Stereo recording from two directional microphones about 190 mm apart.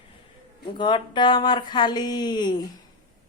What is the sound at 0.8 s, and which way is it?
Speech, 25° left (ahead or behind).